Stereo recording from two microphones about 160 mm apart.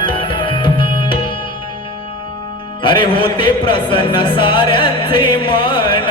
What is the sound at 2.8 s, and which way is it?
Music, 30° left (ahead or behind).